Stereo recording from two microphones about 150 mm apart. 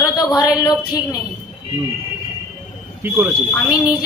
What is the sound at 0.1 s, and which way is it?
A woman's voice, 25° left (ahead or behind).